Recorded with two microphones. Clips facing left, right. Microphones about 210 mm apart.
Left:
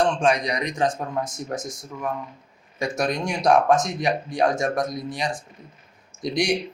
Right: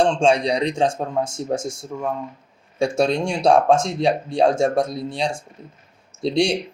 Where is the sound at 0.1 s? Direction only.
30° right (ahead or behind).